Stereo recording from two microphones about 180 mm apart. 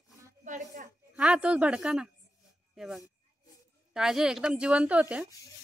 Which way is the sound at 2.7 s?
Centre (ahead or behind).